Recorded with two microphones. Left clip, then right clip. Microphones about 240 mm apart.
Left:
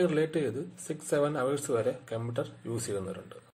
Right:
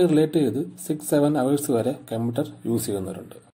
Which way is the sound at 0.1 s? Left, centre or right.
Right.